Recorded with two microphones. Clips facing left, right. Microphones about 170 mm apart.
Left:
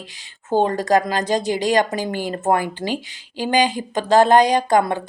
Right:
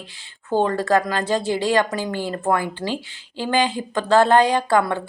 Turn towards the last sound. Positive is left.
turn(degrees=20)  # may be behind; listen again after turning